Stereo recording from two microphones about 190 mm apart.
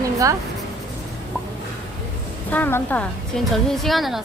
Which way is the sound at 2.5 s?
10° left (ahead or behind).